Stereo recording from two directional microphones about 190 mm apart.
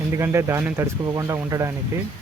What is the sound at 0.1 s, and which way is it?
Speech, 15° right (ahead or behind).